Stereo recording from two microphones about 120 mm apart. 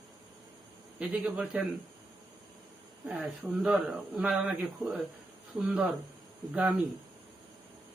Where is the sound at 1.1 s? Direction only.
10° right (ahead or behind).